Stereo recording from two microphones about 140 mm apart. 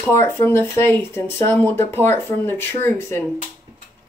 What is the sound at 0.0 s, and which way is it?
Speech, 15° left (ahead or behind).